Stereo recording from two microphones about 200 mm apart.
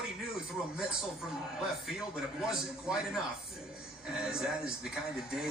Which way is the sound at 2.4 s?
5° right (ahead or behind).